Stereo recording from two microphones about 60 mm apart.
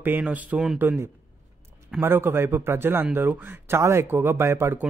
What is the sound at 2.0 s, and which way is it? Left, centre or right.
Speech, right.